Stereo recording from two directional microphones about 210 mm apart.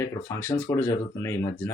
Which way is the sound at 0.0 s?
10° left (ahead or behind).